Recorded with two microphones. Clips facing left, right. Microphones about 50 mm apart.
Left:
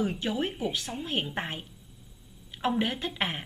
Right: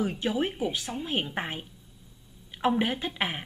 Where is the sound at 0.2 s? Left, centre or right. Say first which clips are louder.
Right 2 dB; centre.